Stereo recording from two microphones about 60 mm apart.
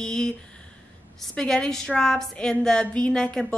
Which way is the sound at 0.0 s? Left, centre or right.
Centre.